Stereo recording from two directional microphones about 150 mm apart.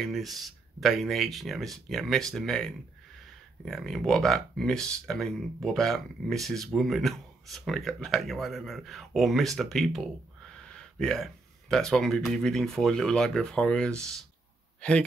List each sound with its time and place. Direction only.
0.0 s speech: centre (ahead or behind)